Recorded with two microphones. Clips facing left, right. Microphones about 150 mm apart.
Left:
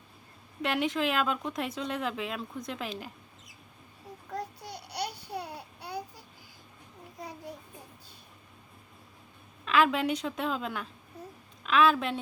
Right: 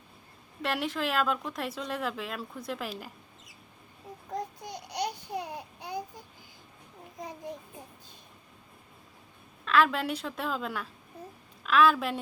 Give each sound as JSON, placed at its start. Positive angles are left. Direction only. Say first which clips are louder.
{"t": 0.6, "sound": "speech", "louder": "left 2 dB", "side_deg": 0}
{"t": 4.3, "sound": "babbling", "louder": "right 2 dB", "side_deg": -15}
{"t": 9.6, "sound": "a woman's voice", "louder": "even", "side_deg": 0}